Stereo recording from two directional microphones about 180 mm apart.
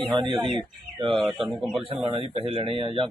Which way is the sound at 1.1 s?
Centre (ahead or behind).